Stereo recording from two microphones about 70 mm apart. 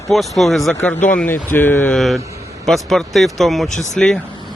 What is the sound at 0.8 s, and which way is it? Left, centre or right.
Speech, centre.